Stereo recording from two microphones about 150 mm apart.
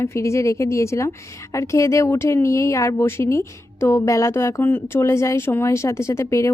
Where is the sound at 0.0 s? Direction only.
20° left (ahead or behind).